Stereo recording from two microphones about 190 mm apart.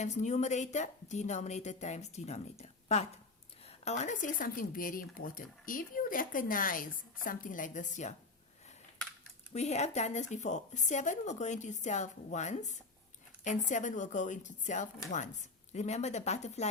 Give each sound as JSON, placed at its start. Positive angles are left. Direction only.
{"t": 0.0, "sound": "speech", "side_deg": 40}
{"t": 9.5, "sound": "speech", "side_deg": 35}